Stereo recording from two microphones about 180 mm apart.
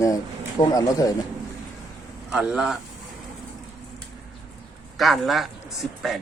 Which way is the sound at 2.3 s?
5° right (ahead or behind).